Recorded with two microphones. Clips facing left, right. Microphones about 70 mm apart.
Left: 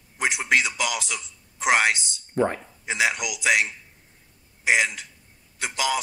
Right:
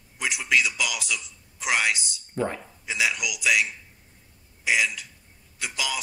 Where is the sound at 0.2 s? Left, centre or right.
Left.